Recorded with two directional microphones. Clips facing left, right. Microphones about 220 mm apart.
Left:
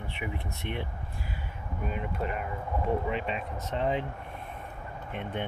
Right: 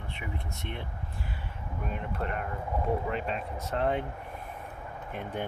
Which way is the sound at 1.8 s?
5° left (ahead or behind).